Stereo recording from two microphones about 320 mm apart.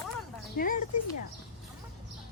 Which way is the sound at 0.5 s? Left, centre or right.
Left.